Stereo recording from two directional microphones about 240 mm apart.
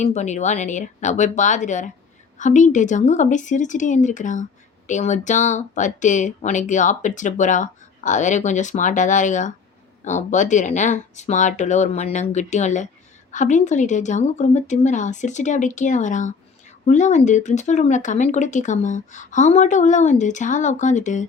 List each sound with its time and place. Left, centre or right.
0.0 s speech: left